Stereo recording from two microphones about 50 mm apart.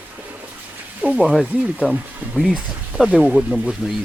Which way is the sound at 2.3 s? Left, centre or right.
Centre.